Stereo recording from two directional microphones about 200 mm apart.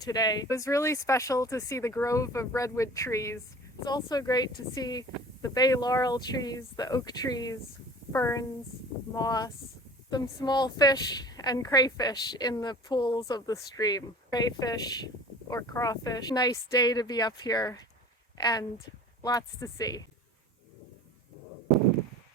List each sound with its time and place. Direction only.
0.0 s a woman's voice: 20° left (ahead or behind)